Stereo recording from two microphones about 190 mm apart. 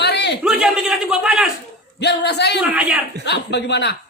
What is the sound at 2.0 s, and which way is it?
Speech, 60° left (ahead or behind).